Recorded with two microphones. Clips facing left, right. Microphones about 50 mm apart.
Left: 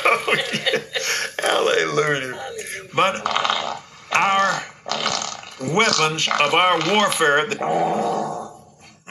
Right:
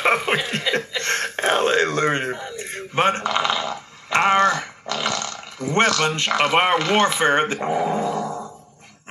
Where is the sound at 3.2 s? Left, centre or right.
Centre.